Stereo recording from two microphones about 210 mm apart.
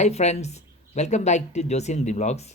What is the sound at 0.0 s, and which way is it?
Speech, 30° left (ahead or behind).